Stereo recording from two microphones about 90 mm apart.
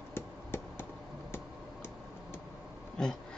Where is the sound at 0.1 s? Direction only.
25° left (ahead or behind).